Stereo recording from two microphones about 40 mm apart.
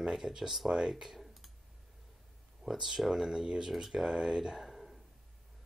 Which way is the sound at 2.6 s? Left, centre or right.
Centre.